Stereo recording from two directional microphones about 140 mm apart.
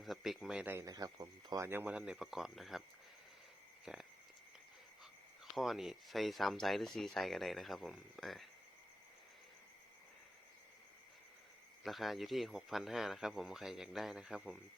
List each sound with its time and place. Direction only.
0.0 s speech: centre (ahead or behind)
0.9 s speech: 25° right (ahead or behind)
1.6 s speech: 15° right (ahead or behind)
3.9 s speech: 5° right (ahead or behind)
5.5 s speech: centre (ahead or behind)
11.8 s speech: centre (ahead or behind)